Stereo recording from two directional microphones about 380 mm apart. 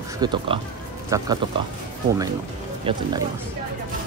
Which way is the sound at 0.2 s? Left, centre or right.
Centre.